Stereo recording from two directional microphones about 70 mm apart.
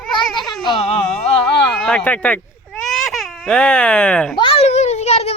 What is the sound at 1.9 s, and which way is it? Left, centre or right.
Speech, centre.